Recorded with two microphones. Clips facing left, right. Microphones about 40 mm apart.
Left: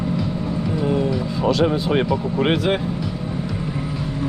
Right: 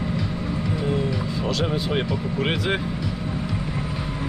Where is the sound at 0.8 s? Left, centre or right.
Centre.